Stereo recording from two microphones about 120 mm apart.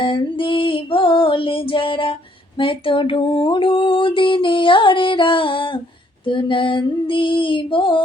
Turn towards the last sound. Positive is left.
turn(degrees=45)  # may be behind; listen again after turning